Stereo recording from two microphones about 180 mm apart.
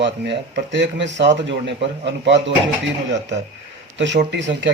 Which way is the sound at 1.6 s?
75° right (ahead or behind).